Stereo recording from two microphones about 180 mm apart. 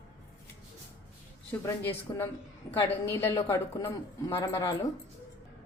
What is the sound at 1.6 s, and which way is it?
A woman's voice, 15° left (ahead or behind).